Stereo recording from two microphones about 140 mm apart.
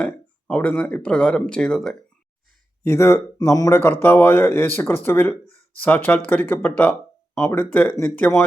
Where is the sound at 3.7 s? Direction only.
15° left (ahead or behind).